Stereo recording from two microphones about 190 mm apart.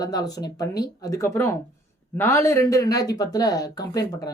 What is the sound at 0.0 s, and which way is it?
Speech, 20° left (ahead or behind).